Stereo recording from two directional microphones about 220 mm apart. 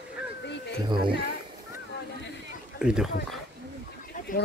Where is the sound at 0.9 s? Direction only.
20° right (ahead or behind).